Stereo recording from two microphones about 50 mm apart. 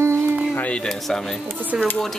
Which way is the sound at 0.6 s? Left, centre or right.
Left.